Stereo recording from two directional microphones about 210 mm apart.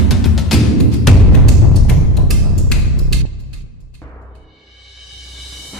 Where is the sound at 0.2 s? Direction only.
Centre (ahead or behind).